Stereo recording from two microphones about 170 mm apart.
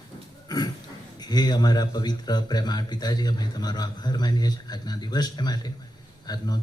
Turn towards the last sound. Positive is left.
turn(degrees=25)  # may be behind; listen again after turning